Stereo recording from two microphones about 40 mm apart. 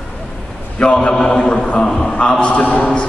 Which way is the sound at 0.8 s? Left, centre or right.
Left.